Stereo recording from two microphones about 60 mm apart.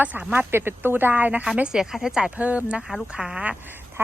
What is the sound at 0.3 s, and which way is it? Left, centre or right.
Speech, right.